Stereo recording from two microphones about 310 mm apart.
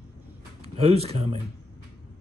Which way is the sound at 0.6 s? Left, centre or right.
Centre.